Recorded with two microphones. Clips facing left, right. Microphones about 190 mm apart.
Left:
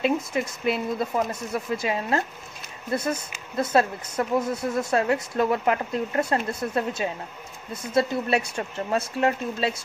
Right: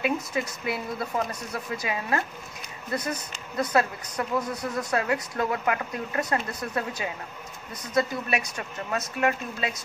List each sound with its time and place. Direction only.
0.3 s speech: 25° left (ahead or behind)